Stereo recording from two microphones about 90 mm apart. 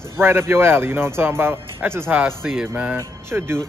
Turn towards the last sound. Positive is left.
turn(degrees=-30)  # may be behind; listen again after turning